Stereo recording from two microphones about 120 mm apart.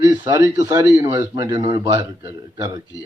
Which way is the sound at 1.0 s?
15° right (ahead or behind).